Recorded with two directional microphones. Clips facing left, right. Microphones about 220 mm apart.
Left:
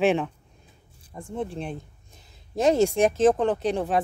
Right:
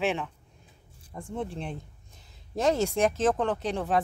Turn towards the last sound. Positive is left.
turn(degrees=10)  # may be behind; listen again after turning